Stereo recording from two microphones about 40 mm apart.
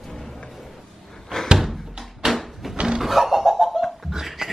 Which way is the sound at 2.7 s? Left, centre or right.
Right.